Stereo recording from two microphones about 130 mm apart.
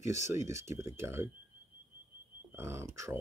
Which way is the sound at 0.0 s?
20° right (ahead or behind).